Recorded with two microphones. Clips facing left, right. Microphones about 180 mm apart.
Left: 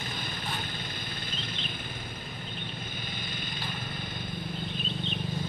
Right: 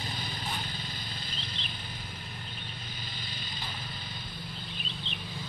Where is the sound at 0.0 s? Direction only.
50° left (ahead or behind).